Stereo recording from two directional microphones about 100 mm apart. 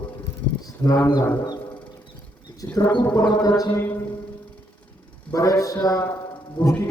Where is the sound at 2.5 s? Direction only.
40° left (ahead or behind).